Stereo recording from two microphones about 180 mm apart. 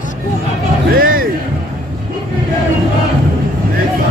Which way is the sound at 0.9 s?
55° right (ahead or behind).